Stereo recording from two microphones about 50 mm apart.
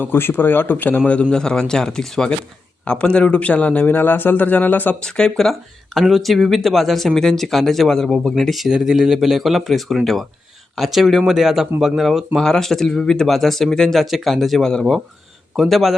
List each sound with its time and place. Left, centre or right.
0.0 s a man's voice: left
1.3 s speech: centre
2.8 s a man's voice: left
5.0 s speech: centre
5.5 s speech: centre
8.6 s speech: centre
14.0 s speech: centre
15.7 s speech: centre